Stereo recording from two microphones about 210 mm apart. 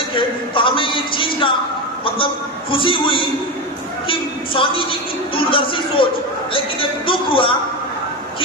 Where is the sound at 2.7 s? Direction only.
25° left (ahead or behind).